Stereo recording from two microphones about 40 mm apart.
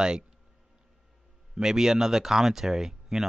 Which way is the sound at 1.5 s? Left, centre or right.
Centre.